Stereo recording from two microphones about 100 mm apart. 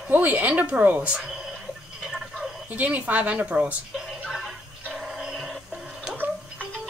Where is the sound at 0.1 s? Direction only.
15° right (ahead or behind).